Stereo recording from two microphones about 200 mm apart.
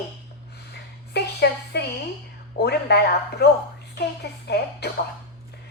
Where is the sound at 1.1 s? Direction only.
55° left (ahead or behind).